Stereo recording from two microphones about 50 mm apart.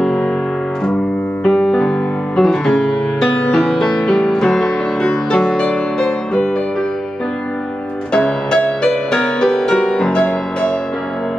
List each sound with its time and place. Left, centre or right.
0.0 s music: centre
1.4 s music: centre
8.5 s music: left